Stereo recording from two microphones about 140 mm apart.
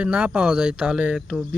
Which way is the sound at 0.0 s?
10° right (ahead or behind).